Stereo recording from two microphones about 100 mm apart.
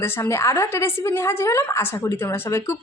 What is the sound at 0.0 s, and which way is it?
A woman's voice, 25° left (ahead or behind).